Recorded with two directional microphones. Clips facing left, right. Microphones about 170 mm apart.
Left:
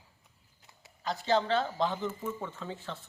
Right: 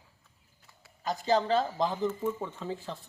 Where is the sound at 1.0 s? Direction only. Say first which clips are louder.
Right 1 dB; 40° right (ahead or behind).